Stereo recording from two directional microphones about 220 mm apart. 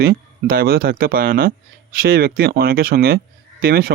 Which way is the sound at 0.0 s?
40° right (ahead or behind).